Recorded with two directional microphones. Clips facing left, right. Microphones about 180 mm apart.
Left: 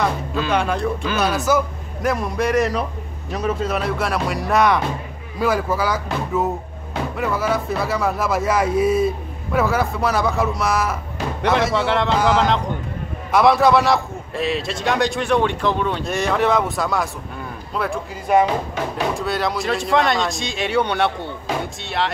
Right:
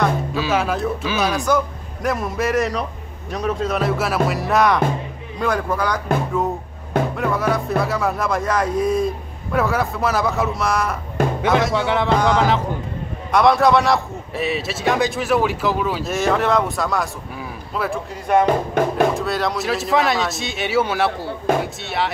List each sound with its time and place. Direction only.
0.0 s a man's voice: 5° right (ahead or behind)
7.2 s a man's voice: centre (ahead or behind)
18.4 s music: 50° right (ahead or behind)
19.1 s a man's voice: centre (ahead or behind)